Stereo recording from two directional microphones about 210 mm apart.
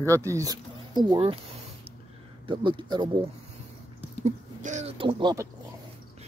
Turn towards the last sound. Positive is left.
turn(degrees=-15)  # may be behind; listen again after turning